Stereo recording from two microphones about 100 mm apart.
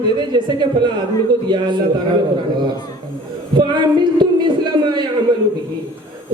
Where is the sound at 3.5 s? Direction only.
50° right (ahead or behind).